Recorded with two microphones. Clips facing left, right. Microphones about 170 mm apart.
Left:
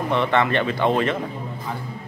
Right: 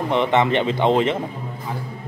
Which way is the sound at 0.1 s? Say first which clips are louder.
Right 2 dB; 20° right (ahead or behind).